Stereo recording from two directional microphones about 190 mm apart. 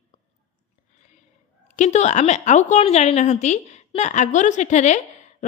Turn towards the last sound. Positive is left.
turn(degrees=40)  # may be behind; listen again after turning